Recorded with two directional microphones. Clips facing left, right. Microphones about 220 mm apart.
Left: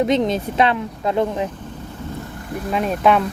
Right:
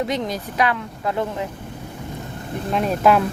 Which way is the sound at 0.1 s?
25° left (ahead or behind).